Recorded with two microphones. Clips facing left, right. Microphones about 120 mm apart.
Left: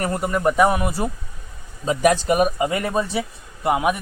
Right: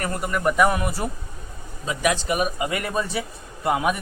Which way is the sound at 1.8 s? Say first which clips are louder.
Left 6 dB; 40° left (ahead or behind).